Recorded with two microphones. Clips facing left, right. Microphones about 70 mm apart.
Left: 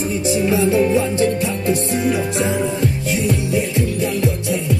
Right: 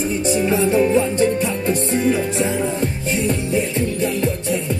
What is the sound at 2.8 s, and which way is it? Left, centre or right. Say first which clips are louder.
Music: left 1 dB; right.